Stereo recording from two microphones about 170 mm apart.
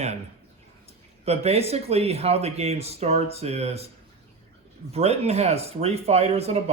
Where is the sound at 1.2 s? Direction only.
35° right (ahead or behind).